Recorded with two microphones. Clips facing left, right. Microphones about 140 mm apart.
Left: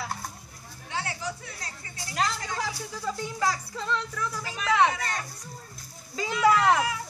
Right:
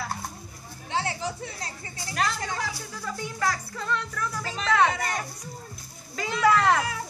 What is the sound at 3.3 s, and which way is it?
Speech, 15° left (ahead or behind).